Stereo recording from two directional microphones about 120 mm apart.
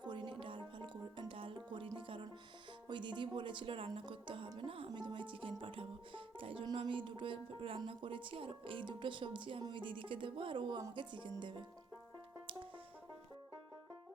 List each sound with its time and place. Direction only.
0.0 s music: 40° right (ahead or behind)
2.9 s speech: 40° right (ahead or behind)
4.9 s music: 40° right (ahead or behind)
6.7 s speech: 45° right (ahead or behind)
10.9 s music: 40° right (ahead or behind)